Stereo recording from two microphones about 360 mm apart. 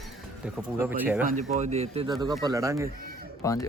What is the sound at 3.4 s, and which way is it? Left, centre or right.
Speech, centre.